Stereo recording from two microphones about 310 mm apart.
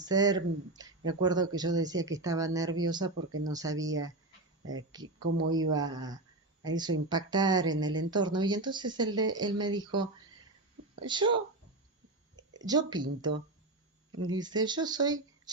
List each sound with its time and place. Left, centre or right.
0.0 s speech: centre
4.6 s speech: right
5.2 s speech: right
5.5 s speech: centre
12.5 s speech: centre